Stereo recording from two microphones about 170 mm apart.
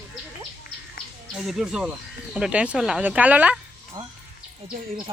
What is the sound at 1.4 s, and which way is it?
Speech, centre (ahead or behind).